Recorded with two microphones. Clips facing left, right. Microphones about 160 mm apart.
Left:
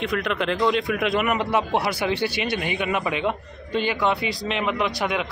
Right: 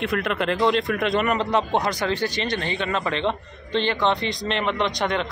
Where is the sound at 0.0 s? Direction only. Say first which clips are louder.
Right 1 dB; centre (ahead or behind).